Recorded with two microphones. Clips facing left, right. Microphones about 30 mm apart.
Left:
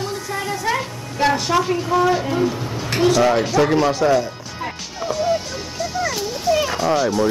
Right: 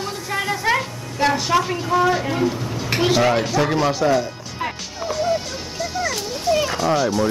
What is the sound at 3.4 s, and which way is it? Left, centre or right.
Speech, centre.